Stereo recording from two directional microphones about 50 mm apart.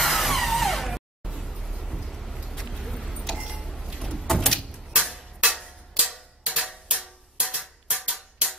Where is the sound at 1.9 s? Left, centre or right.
Centre.